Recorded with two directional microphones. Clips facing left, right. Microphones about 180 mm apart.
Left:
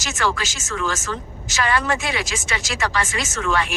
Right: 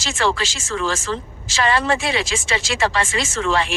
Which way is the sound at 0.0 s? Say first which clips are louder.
Right 3 dB; 30° right (ahead or behind).